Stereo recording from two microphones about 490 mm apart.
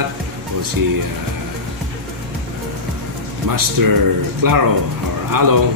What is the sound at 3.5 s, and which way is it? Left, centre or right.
Speech, right.